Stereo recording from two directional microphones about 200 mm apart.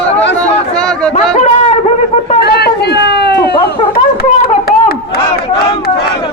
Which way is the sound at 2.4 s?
55° left (ahead or behind).